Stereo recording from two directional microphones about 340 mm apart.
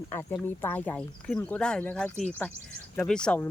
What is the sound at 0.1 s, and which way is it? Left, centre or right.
Speech, centre.